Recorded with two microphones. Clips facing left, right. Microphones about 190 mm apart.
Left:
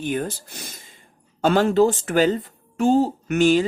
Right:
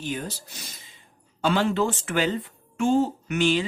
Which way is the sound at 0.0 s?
55° left (ahead or behind).